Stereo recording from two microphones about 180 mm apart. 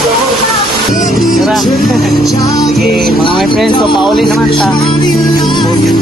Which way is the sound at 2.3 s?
20° left (ahead or behind).